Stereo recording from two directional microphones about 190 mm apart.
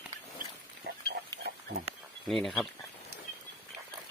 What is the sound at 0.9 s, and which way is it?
Pig, 55° right (ahead or behind).